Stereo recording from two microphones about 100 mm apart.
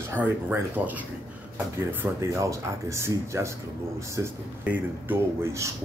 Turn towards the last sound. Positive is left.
turn(degrees=-20)  # may be behind; listen again after turning